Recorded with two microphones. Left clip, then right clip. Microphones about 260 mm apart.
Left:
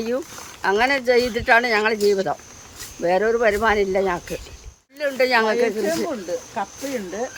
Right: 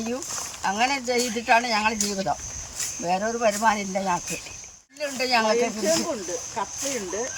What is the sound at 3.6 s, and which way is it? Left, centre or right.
Speech, centre.